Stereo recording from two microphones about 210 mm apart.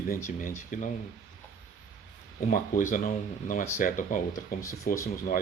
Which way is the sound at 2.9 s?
40° left (ahead or behind).